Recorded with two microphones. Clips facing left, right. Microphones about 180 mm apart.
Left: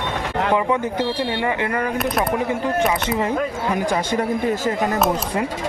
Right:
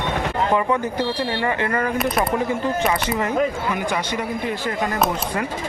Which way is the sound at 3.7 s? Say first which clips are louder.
Left 3 dB; 40° left (ahead or behind).